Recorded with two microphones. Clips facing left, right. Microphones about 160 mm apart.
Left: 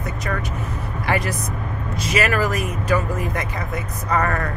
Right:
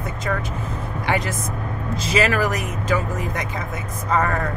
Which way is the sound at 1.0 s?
20° right (ahead or behind).